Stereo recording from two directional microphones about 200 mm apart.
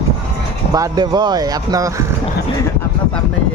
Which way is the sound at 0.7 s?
20° right (ahead or behind).